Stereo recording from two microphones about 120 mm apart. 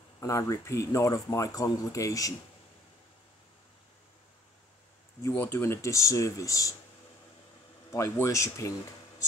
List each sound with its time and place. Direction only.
0.2 s speech: 25° left (ahead or behind)
5.3 s speech: 20° left (ahead or behind)
7.9 s speech: 25° left (ahead or behind)